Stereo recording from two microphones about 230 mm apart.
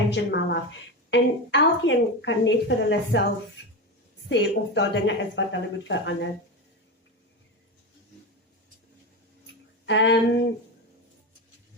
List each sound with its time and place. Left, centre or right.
0.1 s a woman's voice: left
4.3 s a woman's voice: left
9.8 s a woman's voice: left